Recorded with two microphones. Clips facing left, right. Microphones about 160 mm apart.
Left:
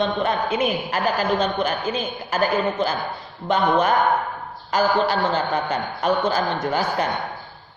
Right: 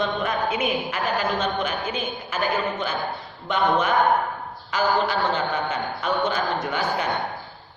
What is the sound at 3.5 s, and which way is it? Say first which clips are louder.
A man's voice: left 3 dB; 40° left (ahead or behind).